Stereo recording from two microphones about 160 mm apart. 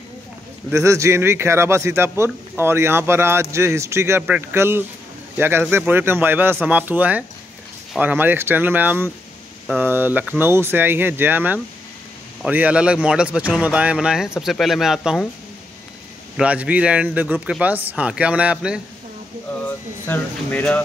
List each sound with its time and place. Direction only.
0.7 s a man's voice: 20° right (ahead or behind); by 15.2 s centre (ahead or behind)
16.3 s a man's voice: 10° right (ahead or behind)
19.6 s speech: 10° left (ahead or behind)